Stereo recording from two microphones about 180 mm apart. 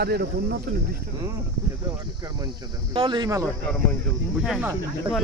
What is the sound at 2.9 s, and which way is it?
Speech, 25° right (ahead or behind).